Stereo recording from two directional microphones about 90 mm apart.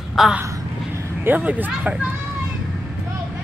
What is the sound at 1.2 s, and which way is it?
Speech, 20° right (ahead or behind).